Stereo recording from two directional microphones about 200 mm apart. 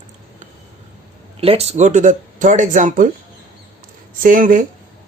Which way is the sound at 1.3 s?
30° right (ahead or behind).